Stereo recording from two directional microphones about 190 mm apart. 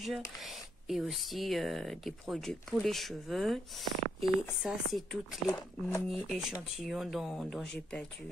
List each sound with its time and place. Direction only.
0.0 s speech: centre (ahead or behind)
5.5 s speech: 20° left (ahead or behind)
6.0 s speech: centre (ahead or behind)